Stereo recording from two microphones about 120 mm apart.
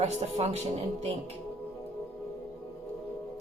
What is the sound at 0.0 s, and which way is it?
Speech, 60° right (ahead or behind).